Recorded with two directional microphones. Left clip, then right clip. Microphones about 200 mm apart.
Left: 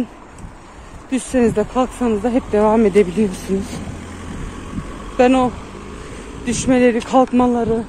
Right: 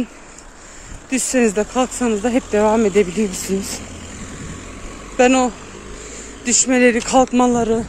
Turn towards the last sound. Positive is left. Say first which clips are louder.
# right 1 dB
turn(degrees=-30)  # may be behind; listen again after turning